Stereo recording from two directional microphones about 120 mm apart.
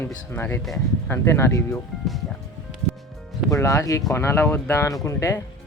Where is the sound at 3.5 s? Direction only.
25° left (ahead or behind).